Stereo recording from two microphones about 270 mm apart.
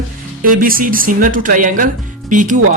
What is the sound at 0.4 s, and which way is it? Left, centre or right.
Speech, right.